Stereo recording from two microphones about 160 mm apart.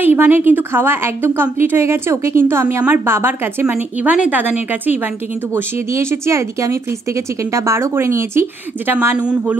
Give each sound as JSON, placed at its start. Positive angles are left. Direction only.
{"t": 0.0, "sound": "speech", "side_deg": -10}